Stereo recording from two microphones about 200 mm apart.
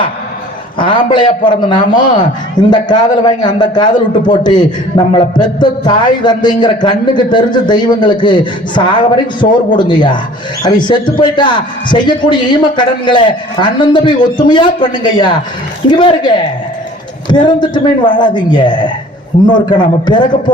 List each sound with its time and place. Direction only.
0.8 s a man's voice: 25° left (ahead or behind)